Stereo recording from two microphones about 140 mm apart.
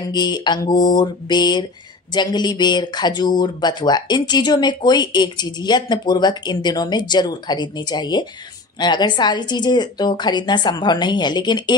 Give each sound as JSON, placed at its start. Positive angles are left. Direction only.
{"t": 0.1, "sound": "speech", "side_deg": 30}